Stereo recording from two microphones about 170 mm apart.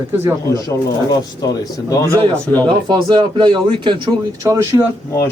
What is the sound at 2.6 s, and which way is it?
Speech, 25° right (ahead or behind).